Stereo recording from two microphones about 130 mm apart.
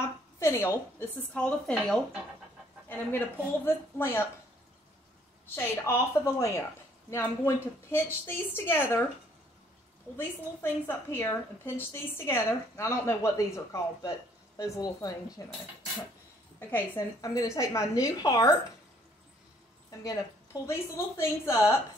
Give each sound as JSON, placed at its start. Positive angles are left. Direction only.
{"t": 0.0, "sound": "a woman's voice", "side_deg": 20}
{"t": 5.5, "sound": "a woman's voice", "side_deg": 20}
{"t": 10.1, "sound": "a woman's voice", "side_deg": 15}
{"t": 16.5, "sound": "a woman's voice", "side_deg": 15}
{"t": 20.6, "sound": "a woman's voice", "side_deg": 20}